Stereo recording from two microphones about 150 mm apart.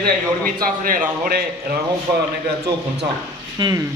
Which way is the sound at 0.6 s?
70° right (ahead or behind).